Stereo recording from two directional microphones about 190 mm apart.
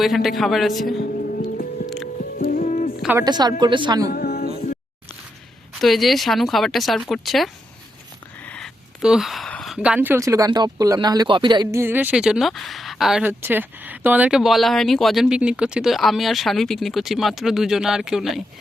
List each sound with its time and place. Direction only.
0.0 s speech: centre (ahead or behind)
1.1 s music: 50° left (ahead or behind)
3.0 s speech: 10° right (ahead or behind)
3.2 s a woman's voice: 20° right (ahead or behind)
4.1 s music: 55° left (ahead or behind)
5.8 s speech: centre (ahead or behind)